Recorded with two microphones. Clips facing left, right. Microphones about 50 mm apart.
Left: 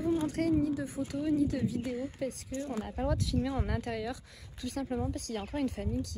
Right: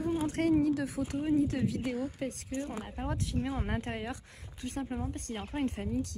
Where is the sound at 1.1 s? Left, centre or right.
Right.